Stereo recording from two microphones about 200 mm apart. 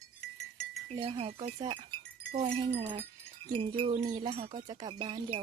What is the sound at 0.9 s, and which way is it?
Speech, 25° right (ahead or behind).